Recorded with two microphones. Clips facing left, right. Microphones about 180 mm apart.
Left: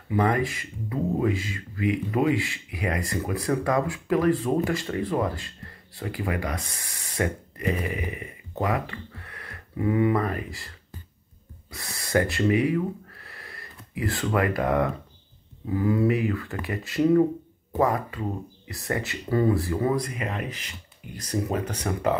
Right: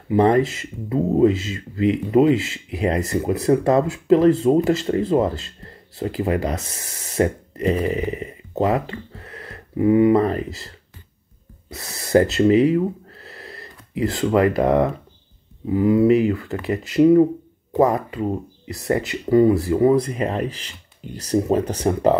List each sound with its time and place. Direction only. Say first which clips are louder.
0.1 s speech: right 8 dB; 25° right (ahead or behind)
11.7 s speech: right 8 dB; 25° right (ahead or behind)